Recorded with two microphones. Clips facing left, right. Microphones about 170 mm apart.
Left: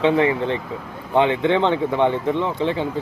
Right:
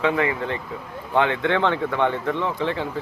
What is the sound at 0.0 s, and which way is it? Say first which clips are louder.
Speech: left 5 dB; 25° left (ahead or behind).